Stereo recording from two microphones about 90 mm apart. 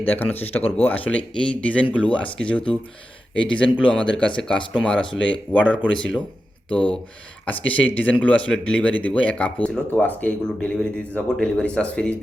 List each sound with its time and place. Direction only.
0.0 s speech: 20° left (ahead or behind)
5.6 s speech: 15° right (ahead or behind)
5.9 s speech: 10° left (ahead or behind)